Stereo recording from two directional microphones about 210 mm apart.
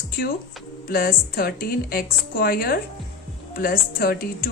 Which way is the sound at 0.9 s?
45° left (ahead or behind).